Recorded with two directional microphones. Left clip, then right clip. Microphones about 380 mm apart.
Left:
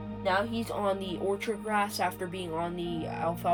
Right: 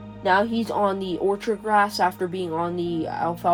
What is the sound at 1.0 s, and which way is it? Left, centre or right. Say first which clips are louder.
Speech: right 8 dB; centre.